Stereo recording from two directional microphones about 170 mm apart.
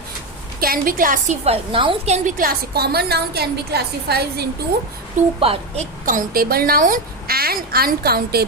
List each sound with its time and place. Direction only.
0.6 s a woman's voice: 55° right (ahead or behind)
1.5 s a woman's voice: 30° right (ahead or behind)
2.4 s a woman's voice: 60° right (ahead or behind)
5.4 s a woman's voice: 35° right (ahead or behind)
6.1 s a woman's voice: 55° right (ahead or behind)